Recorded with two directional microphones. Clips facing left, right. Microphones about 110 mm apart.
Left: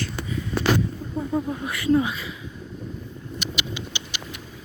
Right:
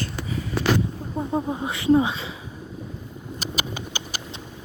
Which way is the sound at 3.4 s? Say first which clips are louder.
Right 1 dB; 45° right (ahead or behind).